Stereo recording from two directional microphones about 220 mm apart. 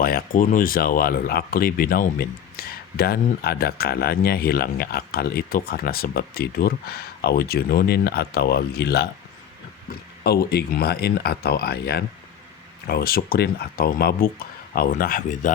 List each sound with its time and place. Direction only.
0.0 s speech: 40° left (ahead or behind)